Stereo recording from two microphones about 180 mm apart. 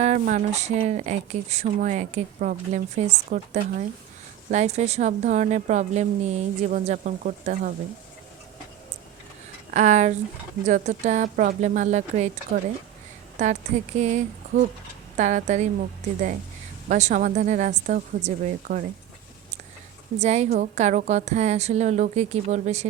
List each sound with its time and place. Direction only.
0.0 s speech: 45° right (ahead or behind)
9.7 s a woman's voice: 40° right (ahead or behind)
13.4 s a woman's voice: 40° right (ahead or behind)
16.9 s a woman's voice: 45° right (ahead or behind)
20.1 s speech: 40° right (ahead or behind)